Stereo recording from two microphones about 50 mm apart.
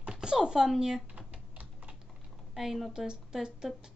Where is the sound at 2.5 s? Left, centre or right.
Centre.